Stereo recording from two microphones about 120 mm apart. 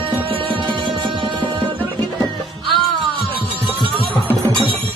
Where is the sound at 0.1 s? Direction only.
45° right (ahead or behind).